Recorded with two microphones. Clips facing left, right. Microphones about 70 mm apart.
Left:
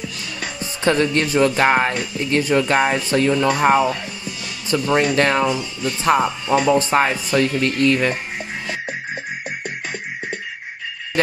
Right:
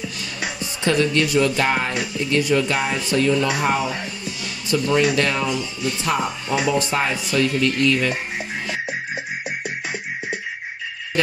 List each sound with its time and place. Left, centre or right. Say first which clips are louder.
0.6 s speech: left 2 dB; left
4.2 s music: even; left
5.1 s speech: left 4 dB; left